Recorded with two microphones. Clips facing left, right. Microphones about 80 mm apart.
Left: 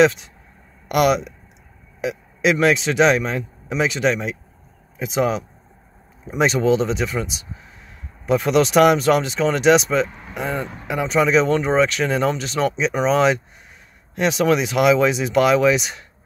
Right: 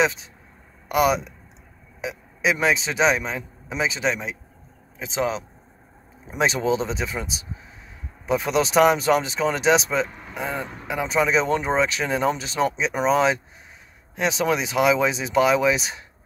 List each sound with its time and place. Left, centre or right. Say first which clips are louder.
2.0 s speech: left 4 dB; centre
8.3 s speech: left 5 dB; centre